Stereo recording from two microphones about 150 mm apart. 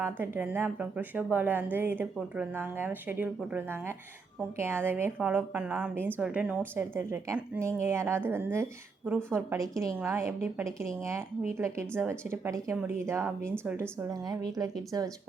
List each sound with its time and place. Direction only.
0.0 s a woman's voice: 15° right (ahead or behind)